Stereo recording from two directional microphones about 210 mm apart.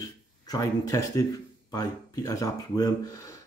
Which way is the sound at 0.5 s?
15° left (ahead or behind).